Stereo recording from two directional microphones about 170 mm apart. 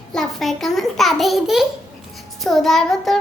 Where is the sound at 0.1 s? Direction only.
Centre (ahead or behind).